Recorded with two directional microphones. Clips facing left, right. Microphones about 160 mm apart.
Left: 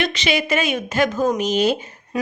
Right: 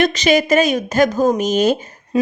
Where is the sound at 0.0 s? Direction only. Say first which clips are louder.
Right 7 dB; 40° right (ahead or behind).